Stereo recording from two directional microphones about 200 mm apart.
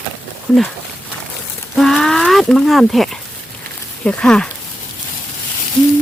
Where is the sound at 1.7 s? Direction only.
Centre (ahead or behind).